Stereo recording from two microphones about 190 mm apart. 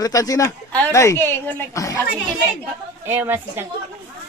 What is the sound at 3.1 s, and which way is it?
Speech, 10° right (ahead or behind).